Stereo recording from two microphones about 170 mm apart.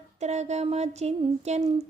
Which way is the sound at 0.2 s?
40° right (ahead or behind).